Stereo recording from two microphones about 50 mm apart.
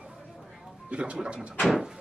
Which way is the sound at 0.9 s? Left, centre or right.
Right.